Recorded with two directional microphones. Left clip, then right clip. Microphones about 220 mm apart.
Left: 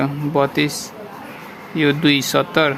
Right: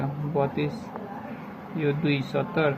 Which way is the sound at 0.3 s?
55° left (ahead or behind).